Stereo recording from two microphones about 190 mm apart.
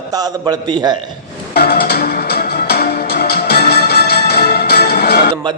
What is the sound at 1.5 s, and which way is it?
Music, 55° left (ahead or behind).